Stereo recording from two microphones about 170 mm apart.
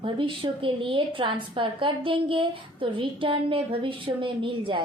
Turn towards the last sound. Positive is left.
turn(degrees=-30)  # may be behind; listen again after turning